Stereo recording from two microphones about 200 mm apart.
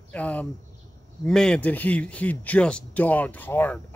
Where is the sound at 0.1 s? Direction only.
10° left (ahead or behind).